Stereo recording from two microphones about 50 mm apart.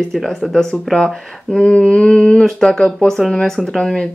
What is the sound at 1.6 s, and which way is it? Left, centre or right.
Speech, centre.